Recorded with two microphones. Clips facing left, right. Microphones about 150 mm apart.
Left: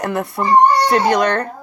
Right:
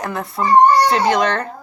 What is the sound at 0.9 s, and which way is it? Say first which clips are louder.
Speech: left 1 dB; 50° left (ahead or behind).